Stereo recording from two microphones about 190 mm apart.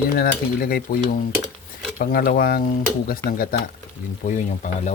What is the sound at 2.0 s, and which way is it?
Speech, 45° left (ahead or behind).